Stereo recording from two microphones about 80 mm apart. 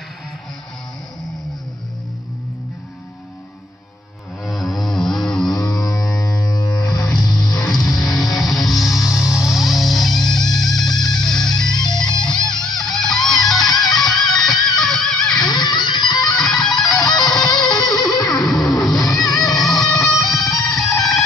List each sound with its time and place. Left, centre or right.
4.5 s music: centre
5.6 s music: left
7.3 s music: centre
15.4 s music: left
16.3 s music: centre